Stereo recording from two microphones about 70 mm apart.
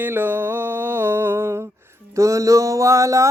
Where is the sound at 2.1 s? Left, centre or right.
Right.